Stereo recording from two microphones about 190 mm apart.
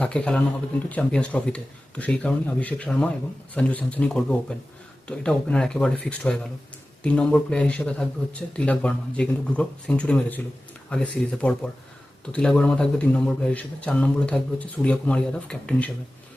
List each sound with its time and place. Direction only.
0.0 s speech: 5° left (ahead or behind)